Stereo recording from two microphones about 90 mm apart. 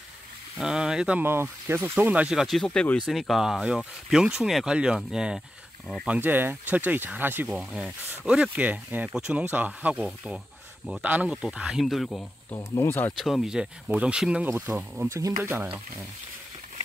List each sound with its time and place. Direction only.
0.6 s speech: 5° right (ahead or behind)
1.2 s speech: 25° right (ahead or behind)
2.2 s speech: centre (ahead or behind)
3.1 s speech: centre (ahead or behind)
6.0 s speech: 20° right (ahead or behind)
7.4 s speech: 10° right (ahead or behind)
12.4 s speech: 30° left (ahead or behind)
13.2 s speech: 5° right (ahead or behind)
15.0 s speech: 35° right (ahead or behind)